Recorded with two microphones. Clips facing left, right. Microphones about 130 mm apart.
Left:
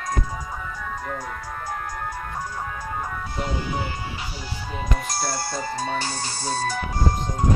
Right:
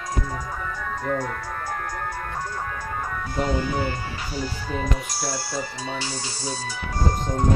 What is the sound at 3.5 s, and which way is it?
Speech, 20° left (ahead or behind).